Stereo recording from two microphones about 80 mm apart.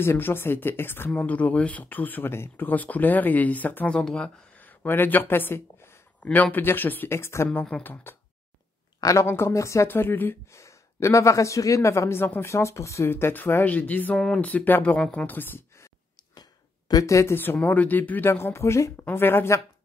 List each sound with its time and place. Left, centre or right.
0.0 s speech: left
9.0 s speech: left
9.8 s speech: left
10.5 s speech: left
14.1 s speech: centre
14.4 s speech: left
15.0 s a woman's voice: centre
15.2 s speech: left
16.3 s a sound: left
17.0 s speech: left
17.4 s speech: left